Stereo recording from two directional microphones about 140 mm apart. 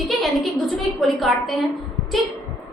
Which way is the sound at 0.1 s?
Centre (ahead or behind).